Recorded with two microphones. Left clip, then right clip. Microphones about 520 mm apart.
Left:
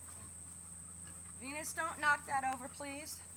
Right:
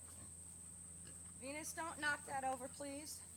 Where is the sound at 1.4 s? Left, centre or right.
Right.